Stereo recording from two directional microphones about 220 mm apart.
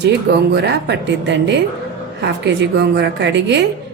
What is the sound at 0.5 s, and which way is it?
A woman's voice, 50° right (ahead or behind).